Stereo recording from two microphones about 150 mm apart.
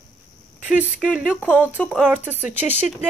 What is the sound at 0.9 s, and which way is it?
A woman's voice, 5° right (ahead or behind).